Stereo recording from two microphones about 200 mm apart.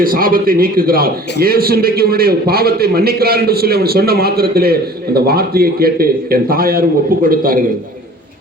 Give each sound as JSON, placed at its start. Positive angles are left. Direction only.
{"t": 0.0, "sound": "a man's voice", "side_deg": -45}